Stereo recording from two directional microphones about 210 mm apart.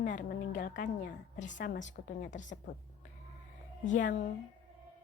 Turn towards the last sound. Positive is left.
turn(degrees=40)  # may be behind; listen again after turning